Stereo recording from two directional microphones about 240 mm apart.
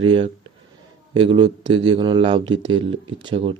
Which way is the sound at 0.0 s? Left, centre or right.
Right.